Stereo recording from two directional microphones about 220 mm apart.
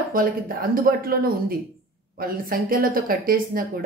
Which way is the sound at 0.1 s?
40° right (ahead or behind).